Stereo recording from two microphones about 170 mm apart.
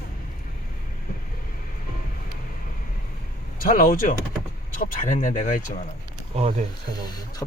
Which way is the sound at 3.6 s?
55° left (ahead or behind).